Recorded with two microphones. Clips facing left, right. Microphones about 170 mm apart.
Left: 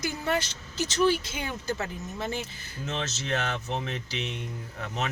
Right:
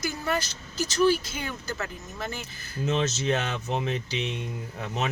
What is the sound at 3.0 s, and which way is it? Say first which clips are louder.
Speech: right 4 dB; 20° right (ahead or behind).